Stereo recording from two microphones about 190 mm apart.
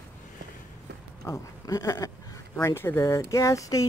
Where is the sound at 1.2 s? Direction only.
15° left (ahead or behind).